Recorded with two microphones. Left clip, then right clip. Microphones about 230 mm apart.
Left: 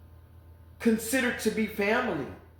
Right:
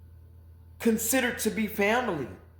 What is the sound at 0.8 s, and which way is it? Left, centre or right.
A man's voice, right.